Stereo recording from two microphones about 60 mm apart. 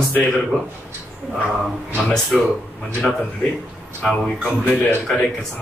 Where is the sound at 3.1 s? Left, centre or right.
Centre.